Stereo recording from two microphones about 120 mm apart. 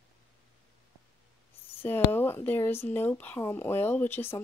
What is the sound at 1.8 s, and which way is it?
Speech, 15° left (ahead or behind).